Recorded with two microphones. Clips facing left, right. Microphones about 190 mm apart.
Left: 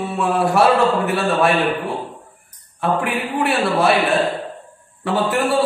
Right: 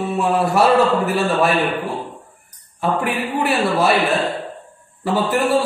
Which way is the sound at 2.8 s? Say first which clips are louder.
Even; centre (ahead or behind).